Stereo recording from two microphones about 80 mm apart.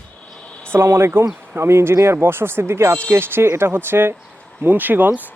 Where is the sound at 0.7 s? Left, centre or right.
Right.